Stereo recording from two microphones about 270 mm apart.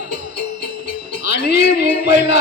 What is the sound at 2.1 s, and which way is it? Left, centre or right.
Speech, left.